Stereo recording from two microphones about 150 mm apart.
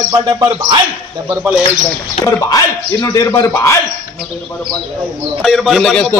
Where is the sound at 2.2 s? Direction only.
20° left (ahead or behind).